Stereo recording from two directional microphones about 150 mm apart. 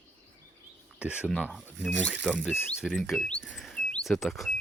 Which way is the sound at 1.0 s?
10° right (ahead or behind).